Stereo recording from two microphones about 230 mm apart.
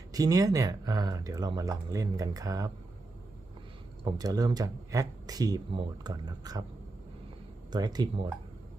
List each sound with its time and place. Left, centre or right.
0.1 s speech: centre
4.0 s speech: centre
7.7 s speech: centre